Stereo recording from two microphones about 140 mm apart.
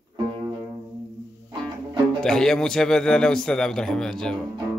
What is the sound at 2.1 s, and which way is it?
A man's voice, 5° left (ahead or behind).